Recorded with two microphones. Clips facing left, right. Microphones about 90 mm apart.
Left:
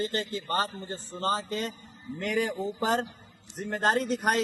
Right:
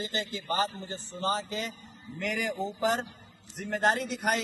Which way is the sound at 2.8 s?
45° left (ahead or behind).